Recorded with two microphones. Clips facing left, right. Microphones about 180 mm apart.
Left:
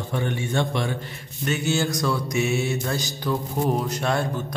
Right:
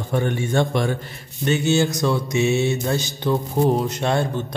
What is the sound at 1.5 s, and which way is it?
Mantra, 25° right (ahead or behind).